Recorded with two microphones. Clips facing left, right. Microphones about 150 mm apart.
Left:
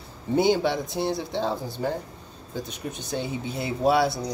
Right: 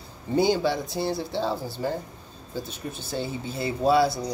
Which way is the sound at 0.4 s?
20° left (ahead or behind).